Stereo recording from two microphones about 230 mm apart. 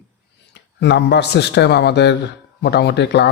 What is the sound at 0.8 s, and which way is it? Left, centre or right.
Speech, left.